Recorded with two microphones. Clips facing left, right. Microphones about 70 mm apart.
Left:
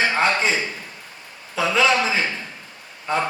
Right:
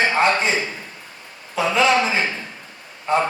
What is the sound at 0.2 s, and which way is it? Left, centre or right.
Speech, right.